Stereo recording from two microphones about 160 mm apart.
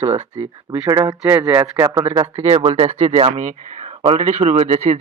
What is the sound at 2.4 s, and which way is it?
A man's voice, 40° right (ahead or behind).